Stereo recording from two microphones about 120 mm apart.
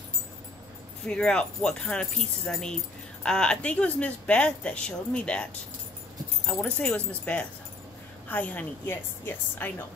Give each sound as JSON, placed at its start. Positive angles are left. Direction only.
{"t": 1.0, "sound": "speech", "side_deg": 5}
{"t": 6.5, "sound": "speech", "side_deg": 10}